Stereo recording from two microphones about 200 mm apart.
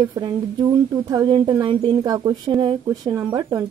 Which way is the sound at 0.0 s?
20° right (ahead or behind).